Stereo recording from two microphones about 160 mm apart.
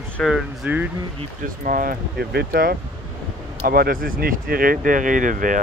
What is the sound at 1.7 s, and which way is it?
Speech, 65° right (ahead or behind).